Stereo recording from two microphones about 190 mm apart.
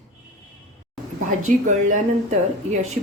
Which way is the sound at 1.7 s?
40° right (ahead or behind).